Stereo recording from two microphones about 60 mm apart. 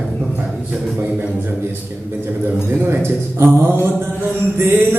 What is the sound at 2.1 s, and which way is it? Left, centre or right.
Speech, right.